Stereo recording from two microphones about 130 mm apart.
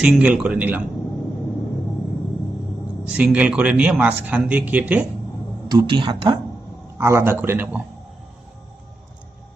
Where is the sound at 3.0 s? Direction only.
10° right (ahead or behind).